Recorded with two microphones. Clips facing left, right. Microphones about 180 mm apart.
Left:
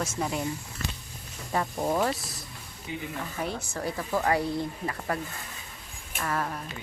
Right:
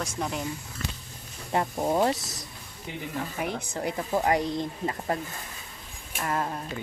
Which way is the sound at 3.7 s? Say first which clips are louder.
Right 2 dB; 20° right (ahead or behind).